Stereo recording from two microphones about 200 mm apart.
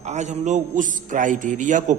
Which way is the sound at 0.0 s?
35° right (ahead or behind).